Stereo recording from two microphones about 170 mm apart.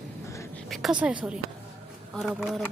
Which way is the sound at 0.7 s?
Centre (ahead or behind).